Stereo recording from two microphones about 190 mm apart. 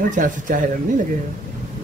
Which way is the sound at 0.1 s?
45° right (ahead or behind).